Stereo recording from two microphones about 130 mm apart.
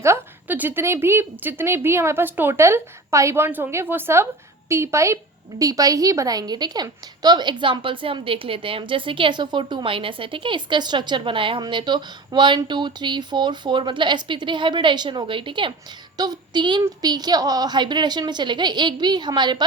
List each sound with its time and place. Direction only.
0.0 s a woman's voice: 15° right (ahead or behind); by 15.7 s 40° right (ahead or behind)
16.1 s child singing: 30° right (ahead or behind)
17.0 s a woman's voice: 30° right (ahead or behind)